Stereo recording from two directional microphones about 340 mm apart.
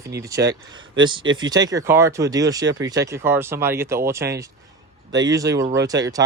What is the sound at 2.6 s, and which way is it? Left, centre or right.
Speech, right.